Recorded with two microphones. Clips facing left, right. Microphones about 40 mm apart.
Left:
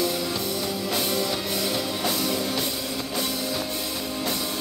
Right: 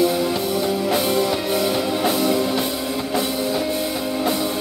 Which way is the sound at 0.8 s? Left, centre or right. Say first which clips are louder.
Right 5 dB; right.